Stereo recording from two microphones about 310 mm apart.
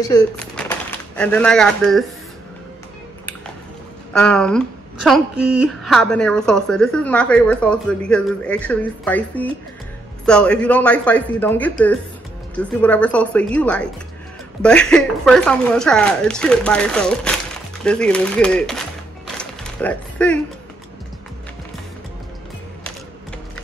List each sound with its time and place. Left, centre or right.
0.0 s speech: centre
4.1 s a woman's voice: centre
19.2 s music: centre